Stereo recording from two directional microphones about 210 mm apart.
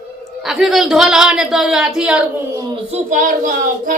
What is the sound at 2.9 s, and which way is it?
A child's voice, 40° right (ahead or behind).